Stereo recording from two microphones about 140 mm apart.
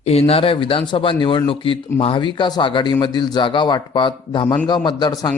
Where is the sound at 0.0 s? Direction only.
45° left (ahead or behind).